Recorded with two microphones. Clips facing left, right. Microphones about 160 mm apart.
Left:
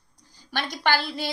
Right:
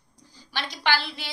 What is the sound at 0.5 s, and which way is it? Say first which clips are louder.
Speech: left 2 dB; 50° left (ahead or behind).